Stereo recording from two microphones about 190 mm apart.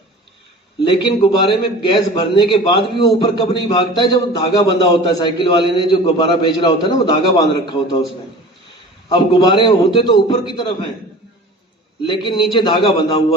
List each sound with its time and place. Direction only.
0.9 s a man's voice: 25° left (ahead or behind)
9.0 s a man's voice: 20° left (ahead or behind)
12.0 s a man's voice: 25° left (ahead or behind)